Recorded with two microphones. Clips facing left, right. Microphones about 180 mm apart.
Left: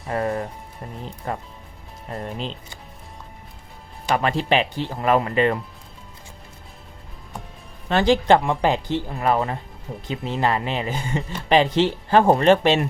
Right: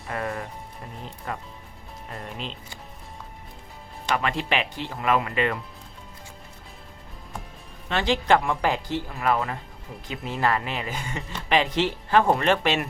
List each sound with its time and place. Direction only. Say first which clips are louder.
0.1 s music: left 6 dB; 30° left (ahead or behind)
1.3 s speech: left 5 dB; 35° left (ahead or behind)
4.1 s speech: left 5 dB; 35° left (ahead or behind)
7.9 s speech: left 5 dB; 40° left (ahead or behind)
8.4 s speech: left 4 dB; 25° left (ahead or behind)